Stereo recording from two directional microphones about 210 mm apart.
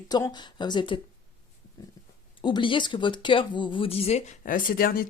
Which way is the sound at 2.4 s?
20° left (ahead or behind).